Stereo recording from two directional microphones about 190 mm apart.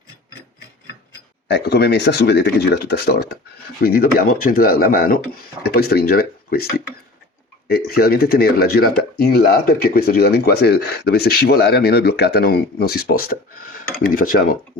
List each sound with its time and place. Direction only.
1.5 s speech: 65° left (ahead or behind)
7.7 s speech: 55° left (ahead or behind)